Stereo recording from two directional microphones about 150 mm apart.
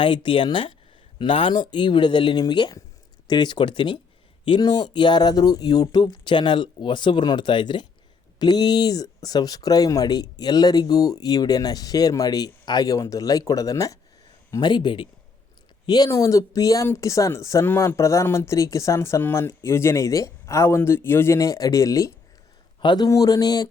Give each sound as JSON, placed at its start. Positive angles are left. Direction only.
{"t": 0.0, "sound": "speech", "side_deg": 35}